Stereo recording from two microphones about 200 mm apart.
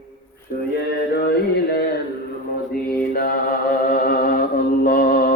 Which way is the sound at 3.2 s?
45° left (ahead or behind).